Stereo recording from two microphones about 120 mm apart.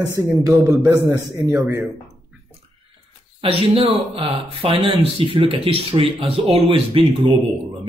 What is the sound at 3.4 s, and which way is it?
A man's voice, 50° right (ahead or behind).